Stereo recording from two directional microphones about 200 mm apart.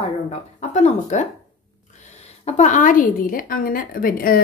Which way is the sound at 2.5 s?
35° left (ahead or behind).